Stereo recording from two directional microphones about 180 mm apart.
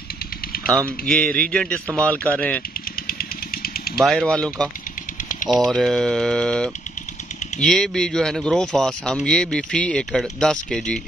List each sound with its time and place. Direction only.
0.8 s speech: 5° left (ahead or behind)
2.7 s vehicle: 55° left (ahead or behind)
4.0 s speech: centre (ahead or behind)